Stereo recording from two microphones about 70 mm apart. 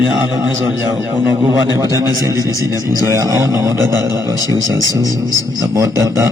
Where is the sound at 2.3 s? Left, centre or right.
Left.